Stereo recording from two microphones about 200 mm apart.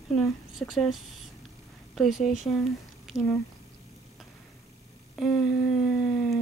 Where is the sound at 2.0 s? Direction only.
Centre (ahead or behind).